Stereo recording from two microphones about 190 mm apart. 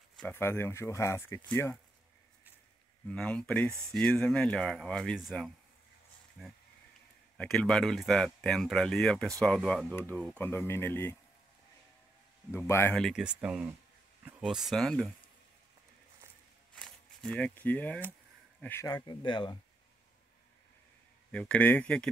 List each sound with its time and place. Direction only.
0.2 s speech: 10° left (ahead or behind)
3.1 s speech: 5° left (ahead or behind)
12.4 s speech: 15° left (ahead or behind)
16.7 s a sound: 5° left (ahead or behind)
18.6 s speech: 10° left (ahead or behind)
21.3 s speech: 5° left (ahead or behind)